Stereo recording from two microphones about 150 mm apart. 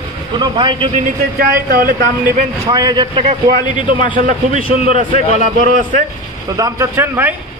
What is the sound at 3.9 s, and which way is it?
A man's voice, 65° right (ahead or behind).